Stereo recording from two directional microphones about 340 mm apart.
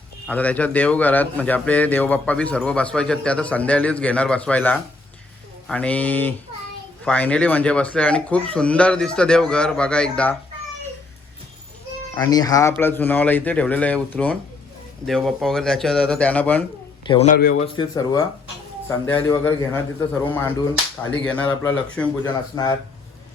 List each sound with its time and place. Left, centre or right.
0.3 s a man's voice: centre
12.1 s a man's voice: centre
17.1 s speech: centre
21.0 s a man's voice: centre